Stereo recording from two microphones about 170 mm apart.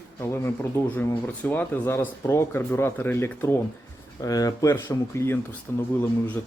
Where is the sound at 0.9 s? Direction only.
10° left (ahead or behind).